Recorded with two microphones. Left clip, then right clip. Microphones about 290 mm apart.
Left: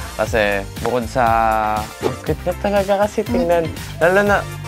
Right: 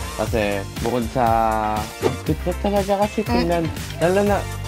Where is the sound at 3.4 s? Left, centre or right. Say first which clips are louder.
Left 5 dB; left.